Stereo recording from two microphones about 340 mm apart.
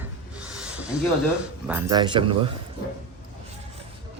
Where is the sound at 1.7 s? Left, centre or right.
Centre.